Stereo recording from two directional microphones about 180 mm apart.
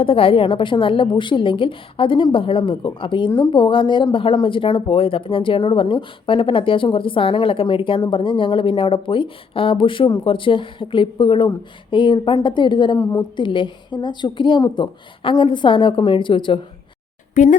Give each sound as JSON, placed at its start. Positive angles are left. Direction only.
{"t": 0.0, "sound": "a woman's voice", "side_deg": 30}
{"t": 17.3, "sound": "speech", "side_deg": 45}